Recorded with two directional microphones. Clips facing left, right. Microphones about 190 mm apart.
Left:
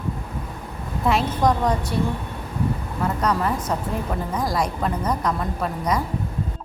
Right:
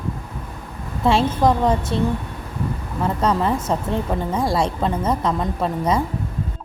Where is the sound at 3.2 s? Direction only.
25° right (ahead or behind).